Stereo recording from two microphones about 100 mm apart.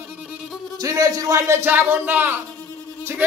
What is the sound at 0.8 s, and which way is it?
A man's voice, 35° right (ahead or behind).